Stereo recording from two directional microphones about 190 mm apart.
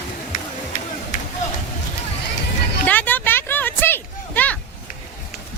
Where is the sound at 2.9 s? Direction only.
10° left (ahead or behind).